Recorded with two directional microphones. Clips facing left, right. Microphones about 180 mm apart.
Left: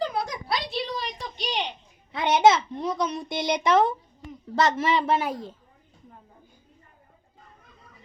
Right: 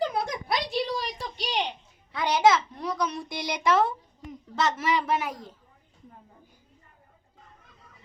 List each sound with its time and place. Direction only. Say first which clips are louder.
0.2 s a sound: even; 20° right (ahead or behind)
2.1 s a child's voice: left 3 dB; 25° left (ahead or behind)
4.5 s a child's voice: left 3 dB; 30° left (ahead or behind)